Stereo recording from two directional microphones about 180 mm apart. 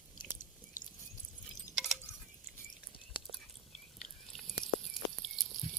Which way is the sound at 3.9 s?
Centre (ahead or behind).